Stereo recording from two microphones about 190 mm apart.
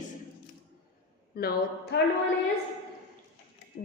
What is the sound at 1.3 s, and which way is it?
Speech, 55° left (ahead or behind).